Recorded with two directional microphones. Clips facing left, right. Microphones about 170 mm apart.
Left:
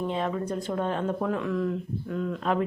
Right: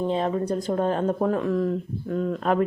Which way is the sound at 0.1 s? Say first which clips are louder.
Right 5 dB; 35° right (ahead or behind).